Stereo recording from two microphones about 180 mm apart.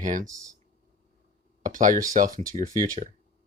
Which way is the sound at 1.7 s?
45° right (ahead or behind).